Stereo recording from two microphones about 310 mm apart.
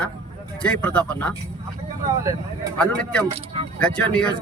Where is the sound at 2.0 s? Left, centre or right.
Centre.